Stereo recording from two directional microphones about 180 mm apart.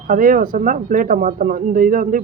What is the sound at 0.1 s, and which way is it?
Speech, 50° right (ahead or behind).